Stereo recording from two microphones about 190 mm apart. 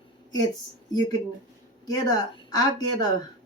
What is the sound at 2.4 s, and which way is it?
Speech, 20° left (ahead or behind).